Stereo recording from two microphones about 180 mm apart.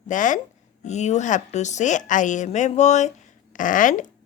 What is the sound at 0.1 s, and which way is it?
A woman's voice, 45° left (ahead or behind).